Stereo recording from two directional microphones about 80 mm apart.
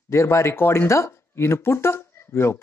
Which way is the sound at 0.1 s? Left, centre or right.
Left.